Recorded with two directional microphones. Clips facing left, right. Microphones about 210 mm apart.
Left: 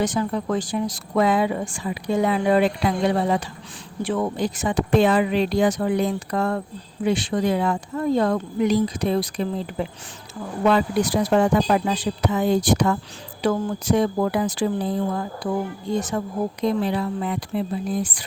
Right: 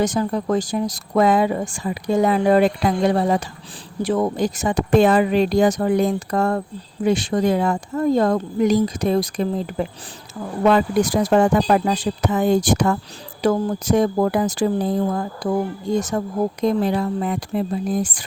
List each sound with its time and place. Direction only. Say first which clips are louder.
0.0 s speech: right 3 dB; 40° right (ahead or behind)